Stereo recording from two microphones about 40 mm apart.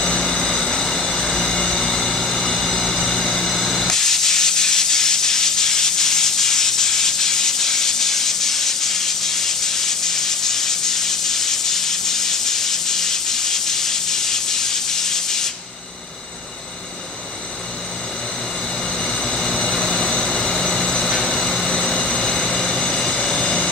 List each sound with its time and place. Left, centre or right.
0.2 s vehicle: centre
3.8 s steam: centre
18.9 s vehicle: centre